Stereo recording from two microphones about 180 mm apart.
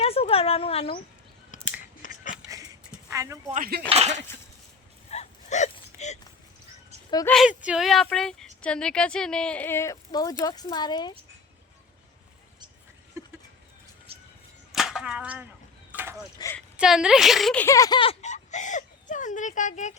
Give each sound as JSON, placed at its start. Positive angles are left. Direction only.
{"t": 0.0, "sound": "a sound", "side_deg": 35}
{"t": 1.8, "sound": "chewing", "side_deg": 50}
{"t": 3.1, "sound": "speech", "side_deg": -20}
{"t": 3.5, "sound": "speech", "side_deg": -55}
{"t": 3.8, "sound": "speech", "side_deg": -35}
{"t": 5.1, "sound": "a sound", "side_deg": 40}
{"t": 7.3, "sound": "speech", "side_deg": 0}
{"t": 13.2, "sound": "goat", "side_deg": -15}
{"t": 14.1, "sound": "whip", "side_deg": -35}
{"t": 14.7, "sound": "a sound", "side_deg": 0}
{"t": 16.7, "sound": "speech", "side_deg": -5}